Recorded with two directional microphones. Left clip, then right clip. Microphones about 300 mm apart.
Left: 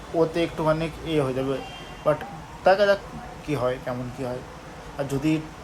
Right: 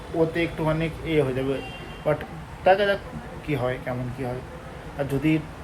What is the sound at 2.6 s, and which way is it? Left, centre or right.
Speech, centre.